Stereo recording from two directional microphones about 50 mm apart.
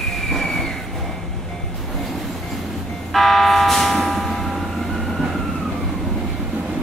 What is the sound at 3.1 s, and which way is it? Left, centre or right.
Vehicle, centre.